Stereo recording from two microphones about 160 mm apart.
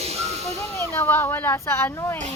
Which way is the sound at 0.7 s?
15° left (ahead or behind).